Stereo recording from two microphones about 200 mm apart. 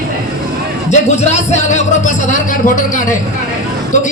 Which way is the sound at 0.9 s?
35° left (ahead or behind).